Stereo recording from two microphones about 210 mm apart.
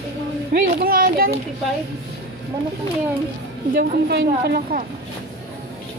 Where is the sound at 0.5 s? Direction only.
40° right (ahead or behind).